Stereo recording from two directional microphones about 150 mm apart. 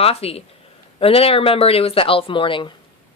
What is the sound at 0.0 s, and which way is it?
A woman's voice, 40° left (ahead or behind).